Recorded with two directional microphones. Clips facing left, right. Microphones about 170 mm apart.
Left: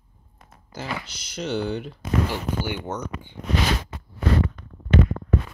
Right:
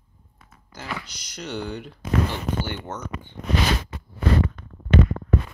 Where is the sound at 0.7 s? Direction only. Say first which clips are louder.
Left 2 dB; 25° left (ahead or behind).